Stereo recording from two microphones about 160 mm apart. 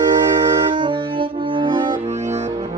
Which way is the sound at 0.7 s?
30° right (ahead or behind).